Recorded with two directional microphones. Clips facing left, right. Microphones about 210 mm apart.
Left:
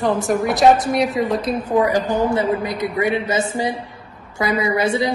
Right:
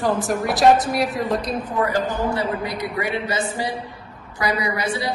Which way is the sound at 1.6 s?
10° left (ahead or behind).